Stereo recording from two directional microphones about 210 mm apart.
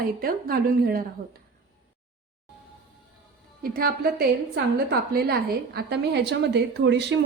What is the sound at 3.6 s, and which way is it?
A woman's voice, 45° right (ahead or behind).